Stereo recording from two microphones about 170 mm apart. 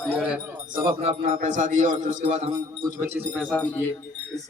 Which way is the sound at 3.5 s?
10° left (ahead or behind).